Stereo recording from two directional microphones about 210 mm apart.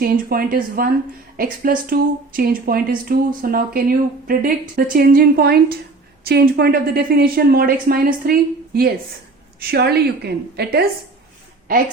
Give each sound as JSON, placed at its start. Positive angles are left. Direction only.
{"t": 0.0, "sound": "speech", "side_deg": -45}
{"t": 1.9, "sound": "speech", "side_deg": -45}